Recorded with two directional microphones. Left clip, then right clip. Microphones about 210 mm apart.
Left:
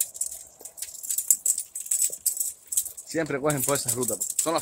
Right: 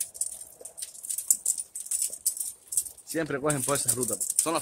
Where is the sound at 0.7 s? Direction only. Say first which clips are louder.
Left 5 dB; 35° left (ahead or behind).